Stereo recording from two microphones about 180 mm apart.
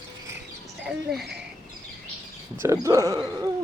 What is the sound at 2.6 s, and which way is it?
Speech, 15° right (ahead or behind).